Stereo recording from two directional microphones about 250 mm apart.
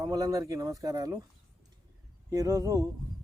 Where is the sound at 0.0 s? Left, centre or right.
Centre.